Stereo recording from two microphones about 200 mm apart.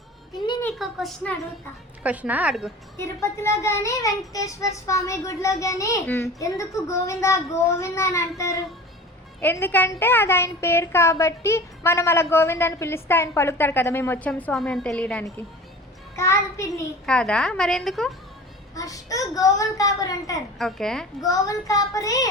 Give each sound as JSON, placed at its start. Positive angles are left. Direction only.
{"t": 0.6, "sound": "a woman's voice", "side_deg": 0}
{"t": 3.0, "sound": "a woman's voice", "side_deg": 15}
{"t": 18.7, "sound": "a woman's voice", "side_deg": 15}
{"t": 20.6, "sound": "a woman's voice", "side_deg": 0}
{"t": 21.2, "sound": "a woman's voice", "side_deg": 15}